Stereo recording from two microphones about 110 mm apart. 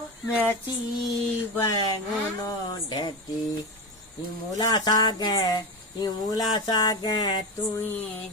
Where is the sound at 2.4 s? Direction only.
40° left (ahead or behind).